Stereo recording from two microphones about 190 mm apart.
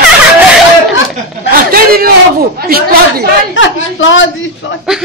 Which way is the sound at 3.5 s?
80° left.